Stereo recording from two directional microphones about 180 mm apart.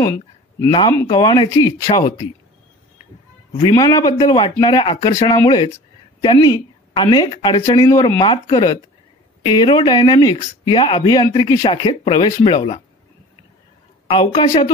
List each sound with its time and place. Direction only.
0.0 s speech: 15° left (ahead or behind)
3.5 s speech: 25° left (ahead or behind)
14.0 s speech: 30° left (ahead or behind)